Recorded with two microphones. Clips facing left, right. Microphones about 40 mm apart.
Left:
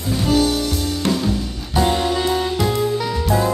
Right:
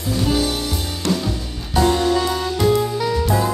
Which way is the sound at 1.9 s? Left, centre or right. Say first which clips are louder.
Right 1 dB; centre.